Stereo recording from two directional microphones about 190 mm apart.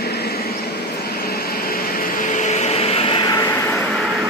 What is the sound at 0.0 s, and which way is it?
Vehicle, 55° left (ahead or behind).